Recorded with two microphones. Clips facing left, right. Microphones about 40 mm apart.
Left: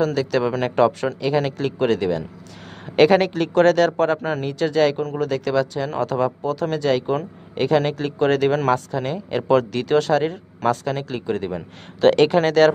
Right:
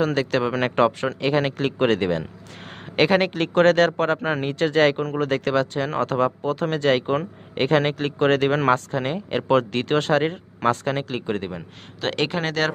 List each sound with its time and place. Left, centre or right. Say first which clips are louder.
0.0 s speech: left 1 dB; right
3.0 s speech: left 4 dB; centre
3.3 s speech: left 1 dB; right
11.5 s speech: left 5 dB; centre